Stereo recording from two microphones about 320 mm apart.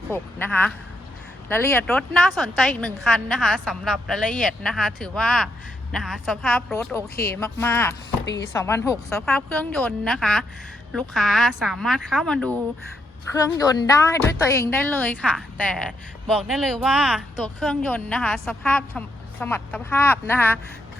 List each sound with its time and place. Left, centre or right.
0.1 s speech: centre
8.2 s speech: left
8.5 s speech: centre